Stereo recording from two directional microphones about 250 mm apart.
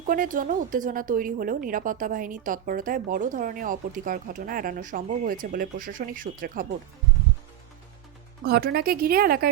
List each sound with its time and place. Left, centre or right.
0.0 s a woman's voice: right
8.4 s a woman's voice: right